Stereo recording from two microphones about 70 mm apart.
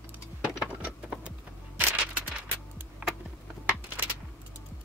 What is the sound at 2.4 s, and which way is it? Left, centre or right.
Music, right.